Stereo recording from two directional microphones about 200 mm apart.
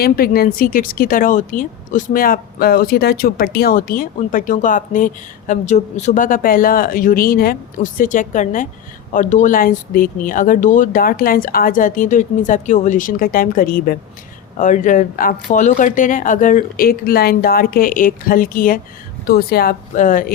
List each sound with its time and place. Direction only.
0.0 s speech: 50° left (ahead or behind)